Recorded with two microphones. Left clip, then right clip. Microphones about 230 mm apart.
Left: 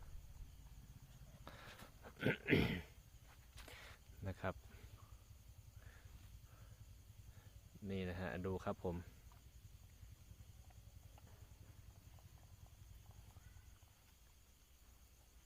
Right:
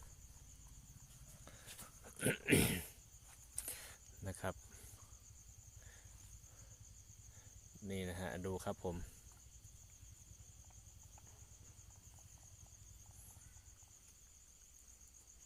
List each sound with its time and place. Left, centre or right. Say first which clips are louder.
2.0 s dog: right 1 dB; centre
2.4 s speech: right 5 dB; right
3.7 s cricket: right 3 dB; centre
7.9 s cricket: right 1 dB; centre